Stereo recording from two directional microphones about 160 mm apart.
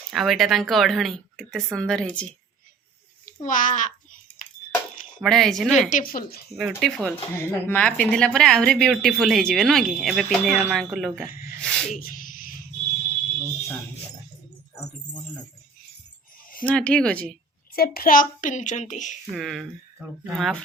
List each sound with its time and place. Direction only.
0.1 s a woman's voice: centre (ahead or behind)
3.2 s a child's voice: 55° left (ahead or behind)
5.2 s a woman's voice: centre (ahead or behind)
5.9 s a child's voice: 65° left (ahead or behind)
6.5 s a woman's voice: 5° right (ahead or behind)
11.9 s a sound: 60° left (ahead or behind)
16.6 s speech: 5° left (ahead or behind)
17.7 s a child's voice: 65° left (ahead or behind); by 19.1 s 50° left (ahead or behind)
19.3 s a woman's voice: centre (ahead or behind)